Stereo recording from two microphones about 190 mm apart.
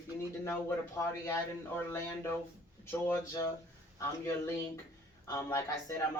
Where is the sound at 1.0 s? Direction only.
15° left (ahead or behind).